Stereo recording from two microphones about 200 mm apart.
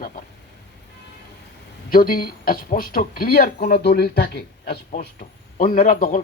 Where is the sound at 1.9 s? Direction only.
45° left (ahead or behind).